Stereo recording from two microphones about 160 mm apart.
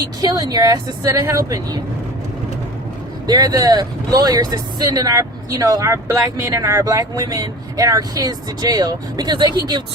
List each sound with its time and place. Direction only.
0.0 s speech: 25° right (ahead or behind)
3.2 s speech: 25° right (ahead or behind)